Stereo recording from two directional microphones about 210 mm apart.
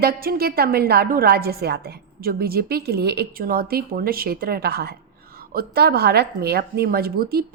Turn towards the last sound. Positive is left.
turn(degrees=-45)  # may be behind; listen again after turning